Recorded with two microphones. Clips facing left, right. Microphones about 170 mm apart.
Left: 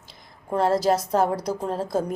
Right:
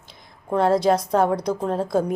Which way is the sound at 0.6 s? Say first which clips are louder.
Right 2 dB; centre (ahead or behind).